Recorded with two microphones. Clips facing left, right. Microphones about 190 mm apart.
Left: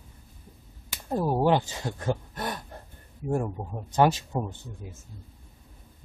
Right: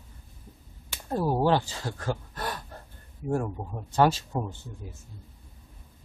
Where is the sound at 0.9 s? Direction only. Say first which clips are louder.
Even; 10° left (ahead or behind).